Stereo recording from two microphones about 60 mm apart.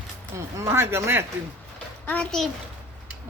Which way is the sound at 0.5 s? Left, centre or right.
Right.